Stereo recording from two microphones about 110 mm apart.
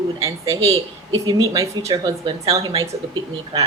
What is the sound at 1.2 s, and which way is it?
Speech, 35° right (ahead or behind).